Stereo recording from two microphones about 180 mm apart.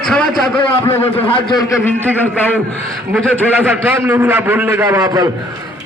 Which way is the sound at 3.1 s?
5° left (ahead or behind).